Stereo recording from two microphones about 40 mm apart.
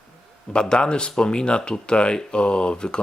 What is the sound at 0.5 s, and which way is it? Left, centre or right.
Speech, left.